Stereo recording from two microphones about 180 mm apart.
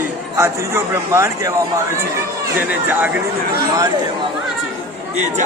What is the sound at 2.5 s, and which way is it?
Speech, 10° right (ahead or behind).